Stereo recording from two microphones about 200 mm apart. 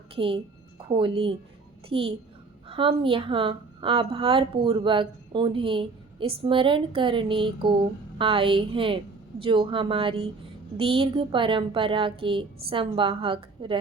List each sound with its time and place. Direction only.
0.2 s a woman's voice: 25° right (ahead or behind)